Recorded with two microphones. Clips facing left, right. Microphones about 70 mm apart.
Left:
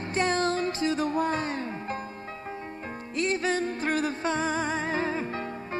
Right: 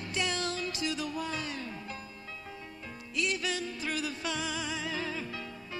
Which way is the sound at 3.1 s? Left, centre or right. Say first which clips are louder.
Left 6 dB; left.